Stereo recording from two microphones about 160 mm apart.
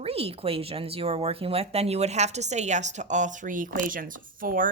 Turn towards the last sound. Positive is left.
turn(degrees=-60)  # may be behind; listen again after turning